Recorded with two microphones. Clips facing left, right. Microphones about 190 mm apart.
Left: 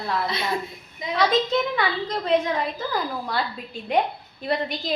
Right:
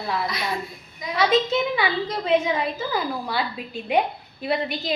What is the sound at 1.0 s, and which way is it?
Speech, 25° left (ahead or behind).